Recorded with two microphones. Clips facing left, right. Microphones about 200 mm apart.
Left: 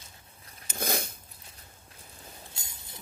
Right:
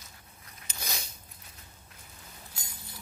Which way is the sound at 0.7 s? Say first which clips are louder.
Left 10 dB; 50° left (ahead or behind).